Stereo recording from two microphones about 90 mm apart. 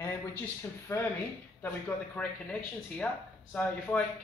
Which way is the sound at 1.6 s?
15° left (ahead or behind).